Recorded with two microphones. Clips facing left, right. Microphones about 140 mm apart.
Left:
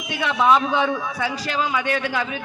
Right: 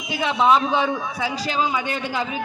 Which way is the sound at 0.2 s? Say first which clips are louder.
Even; 25° right (ahead or behind).